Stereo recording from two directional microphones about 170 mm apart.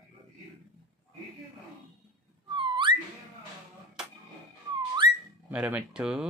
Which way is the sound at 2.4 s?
30° right (ahead or behind).